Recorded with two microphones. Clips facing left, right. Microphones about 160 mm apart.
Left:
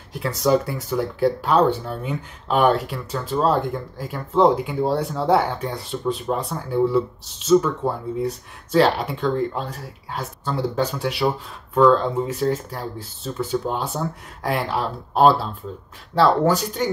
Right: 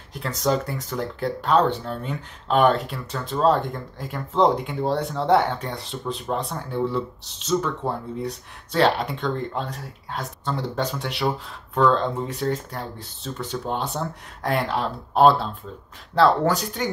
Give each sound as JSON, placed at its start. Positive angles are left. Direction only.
{"t": 0.1, "sound": "speech", "side_deg": 5}